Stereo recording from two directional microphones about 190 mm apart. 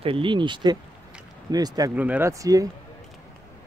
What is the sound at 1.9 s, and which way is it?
Speech, 10° right (ahead or behind).